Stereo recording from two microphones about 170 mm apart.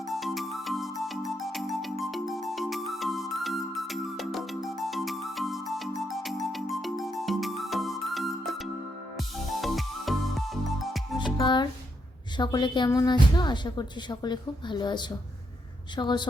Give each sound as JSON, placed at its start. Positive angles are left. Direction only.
{"t": 0.1, "sound": "music", "side_deg": 0}
{"t": 11.2, "sound": "music", "side_deg": 25}
{"t": 12.4, "sound": "speech", "side_deg": 25}